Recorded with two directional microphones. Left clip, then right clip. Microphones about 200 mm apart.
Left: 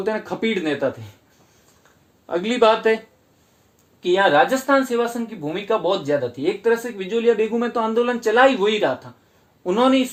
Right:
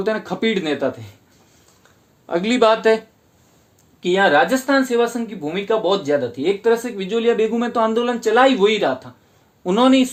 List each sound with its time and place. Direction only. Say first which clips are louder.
0.0 s speech: right 2 dB; 40° right (ahead or behind)
2.2 s speech: right 1 dB; 40° right (ahead or behind)
4.0 s speech: right 1 dB; 35° right (ahead or behind)